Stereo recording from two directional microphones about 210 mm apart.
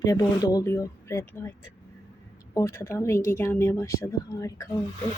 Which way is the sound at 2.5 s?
10° left (ahead or behind).